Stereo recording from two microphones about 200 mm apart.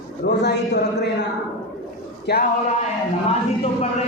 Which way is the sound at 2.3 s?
55° left (ahead or behind).